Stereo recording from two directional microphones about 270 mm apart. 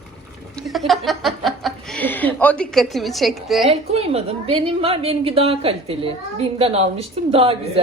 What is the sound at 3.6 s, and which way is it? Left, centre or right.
A woman's voice, right.